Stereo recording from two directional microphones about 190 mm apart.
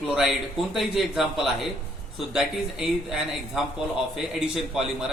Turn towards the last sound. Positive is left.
turn(degrees=0)  # may be behind; listen again after turning